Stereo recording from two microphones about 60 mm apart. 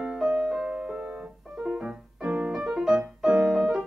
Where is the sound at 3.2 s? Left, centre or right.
Centre.